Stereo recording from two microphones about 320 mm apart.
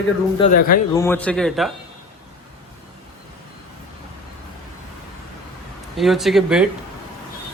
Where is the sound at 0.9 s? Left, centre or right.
Centre.